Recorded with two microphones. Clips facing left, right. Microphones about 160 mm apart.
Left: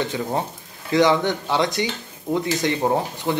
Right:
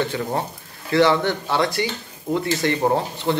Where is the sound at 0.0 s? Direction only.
15° left (ahead or behind).